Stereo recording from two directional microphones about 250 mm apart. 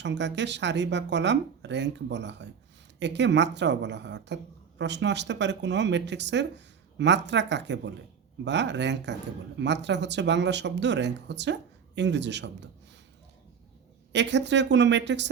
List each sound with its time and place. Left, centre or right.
0.0 s speech: right
14.1 s speech: right